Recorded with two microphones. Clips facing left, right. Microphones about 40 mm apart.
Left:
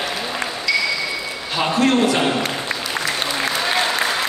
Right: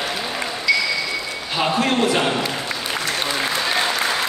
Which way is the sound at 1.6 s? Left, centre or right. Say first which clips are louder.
Left 2 dB; centre.